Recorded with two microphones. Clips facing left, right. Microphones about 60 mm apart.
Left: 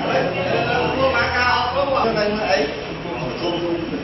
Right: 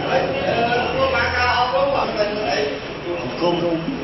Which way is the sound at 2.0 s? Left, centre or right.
Left.